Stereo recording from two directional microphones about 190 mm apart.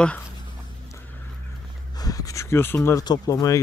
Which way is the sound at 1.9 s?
20° left (ahead or behind).